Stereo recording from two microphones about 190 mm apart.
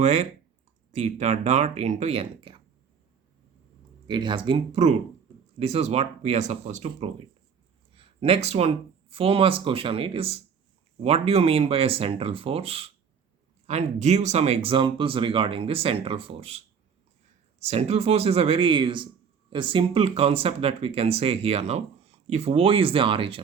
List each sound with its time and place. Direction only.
0.0 s speech: 35° right (ahead or behind)
4.0 s speech: 25° right (ahead or behind)
17.6 s speech: 35° right (ahead or behind)